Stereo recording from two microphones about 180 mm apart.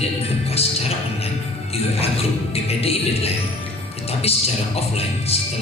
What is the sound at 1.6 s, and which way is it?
Music, 35° left (ahead or behind).